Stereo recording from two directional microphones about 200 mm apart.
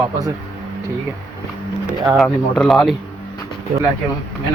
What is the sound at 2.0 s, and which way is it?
Speech, centre (ahead or behind).